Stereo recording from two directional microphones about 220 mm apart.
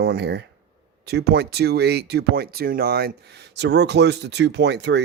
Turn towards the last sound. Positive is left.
turn(degrees=-50)  # may be behind; listen again after turning